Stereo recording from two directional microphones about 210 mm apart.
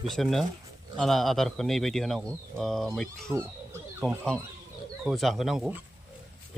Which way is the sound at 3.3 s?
10° right (ahead or behind).